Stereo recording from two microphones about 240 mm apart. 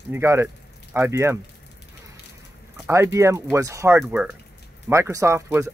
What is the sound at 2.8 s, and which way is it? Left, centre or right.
Speech, centre.